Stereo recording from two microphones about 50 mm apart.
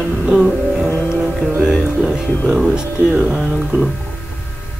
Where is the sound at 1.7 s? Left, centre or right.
Centre.